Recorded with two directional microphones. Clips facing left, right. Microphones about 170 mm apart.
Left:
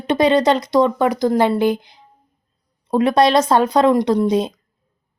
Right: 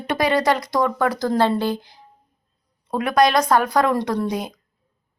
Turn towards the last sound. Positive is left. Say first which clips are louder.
# left 7 dB
turn(degrees=25)  # may be behind; listen again after turning